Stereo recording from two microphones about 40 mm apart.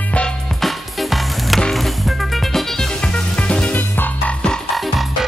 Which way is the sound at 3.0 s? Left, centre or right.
Left.